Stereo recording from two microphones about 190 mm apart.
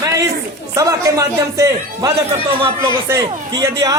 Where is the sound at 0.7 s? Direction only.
15° right (ahead or behind).